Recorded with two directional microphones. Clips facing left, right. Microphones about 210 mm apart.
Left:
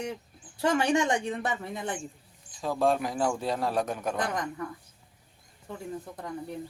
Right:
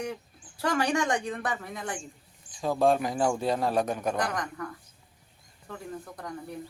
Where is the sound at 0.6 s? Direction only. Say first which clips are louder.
Left 2 dB; 25° left (ahead or behind).